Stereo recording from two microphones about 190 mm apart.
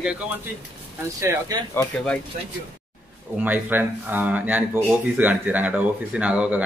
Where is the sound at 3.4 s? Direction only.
10° right (ahead or behind).